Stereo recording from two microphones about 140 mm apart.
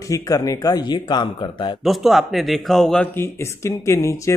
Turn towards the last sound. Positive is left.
turn(degrees=20)  # may be behind; listen again after turning